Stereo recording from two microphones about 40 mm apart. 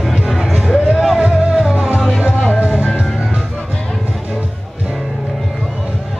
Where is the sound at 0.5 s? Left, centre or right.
Centre.